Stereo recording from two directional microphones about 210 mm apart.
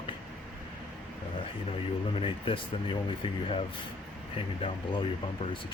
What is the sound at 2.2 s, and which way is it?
Speech, 25° left (ahead or behind).